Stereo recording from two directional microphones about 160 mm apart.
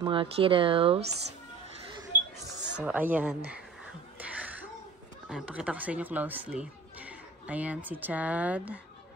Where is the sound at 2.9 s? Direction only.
10° right (ahead or behind).